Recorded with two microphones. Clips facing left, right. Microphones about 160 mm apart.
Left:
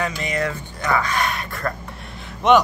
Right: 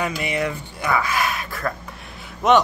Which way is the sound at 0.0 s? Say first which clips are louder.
Even; 10° right (ahead or behind).